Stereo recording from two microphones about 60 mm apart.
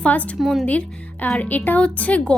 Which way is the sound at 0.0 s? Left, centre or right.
Left.